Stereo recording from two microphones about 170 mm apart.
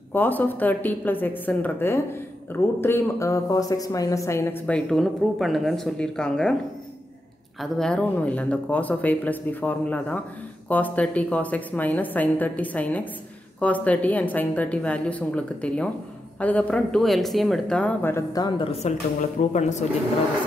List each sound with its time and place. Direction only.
0.1 s speech: 10° left (ahead or behind)
7.6 s speech: 5° left (ahead or behind); by 18.7 s 20° left (ahead or behind)
18.7 s a woman's voice: 40° left (ahead or behind)